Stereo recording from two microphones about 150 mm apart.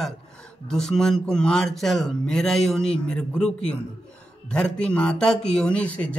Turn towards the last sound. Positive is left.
turn(degrees=10)  # may be behind; listen again after turning